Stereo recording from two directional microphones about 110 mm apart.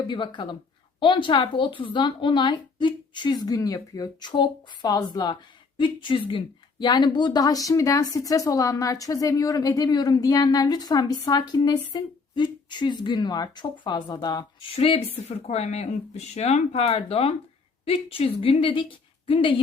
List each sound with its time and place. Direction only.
0.1 s a woman's voice: 45° left (ahead or behind)
14.8 s speech: 60° left (ahead or behind)